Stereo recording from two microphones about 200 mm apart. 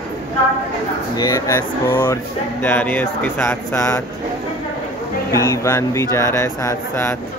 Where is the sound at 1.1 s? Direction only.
20° left (ahead or behind).